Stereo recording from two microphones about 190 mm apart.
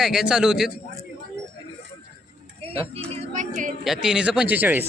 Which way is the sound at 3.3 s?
40° right (ahead or behind).